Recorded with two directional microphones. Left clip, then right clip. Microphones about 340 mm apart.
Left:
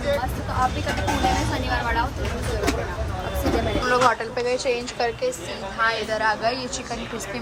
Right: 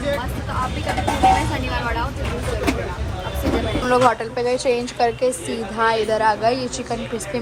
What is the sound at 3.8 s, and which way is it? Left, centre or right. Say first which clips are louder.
A woman's voice: right 4 dB; centre.